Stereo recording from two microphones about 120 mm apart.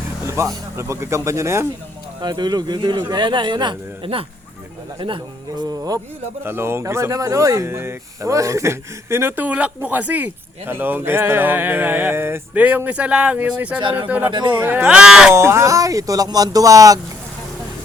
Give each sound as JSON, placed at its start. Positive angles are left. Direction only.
{"t": 0.3, "sound": "speech", "side_deg": -25}
{"t": 2.2, "sound": "speech", "side_deg": -35}
{"t": 6.4, "sound": "speech", "side_deg": -20}
{"t": 15.3, "sound": "speech", "side_deg": -20}